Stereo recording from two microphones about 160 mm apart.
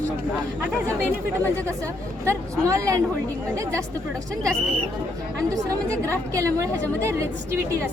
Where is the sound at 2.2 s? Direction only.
20° right (ahead or behind).